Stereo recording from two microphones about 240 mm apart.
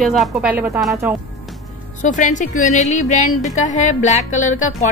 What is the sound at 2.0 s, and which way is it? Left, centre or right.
Speech, left.